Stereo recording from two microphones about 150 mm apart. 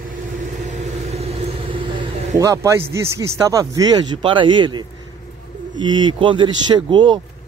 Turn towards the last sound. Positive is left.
turn(degrees=-30)  # may be behind; listen again after turning